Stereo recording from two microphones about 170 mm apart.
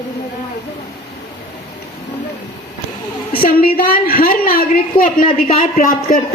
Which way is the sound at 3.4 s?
60° left (ahead or behind).